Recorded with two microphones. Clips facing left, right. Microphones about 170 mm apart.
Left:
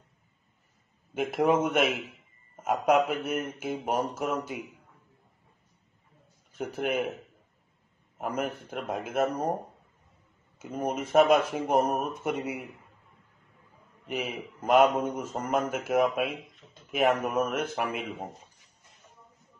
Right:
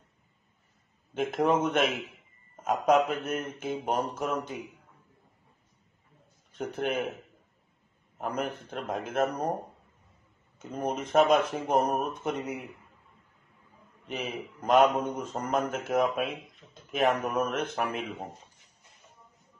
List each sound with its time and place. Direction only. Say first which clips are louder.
1.1 s speech: left 1 dB; 5° left (ahead or behind)
6.5 s speech: left 1 dB; 5° left (ahead or behind)
8.2 s speech: left 1 dB; 5° left (ahead or behind)
10.6 s speech: left 1 dB; 5° left (ahead or behind)
14.0 s speech: left 2 dB; 10° left (ahead or behind)